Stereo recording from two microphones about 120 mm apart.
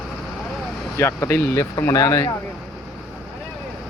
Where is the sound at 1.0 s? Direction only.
20° left (ahead or behind).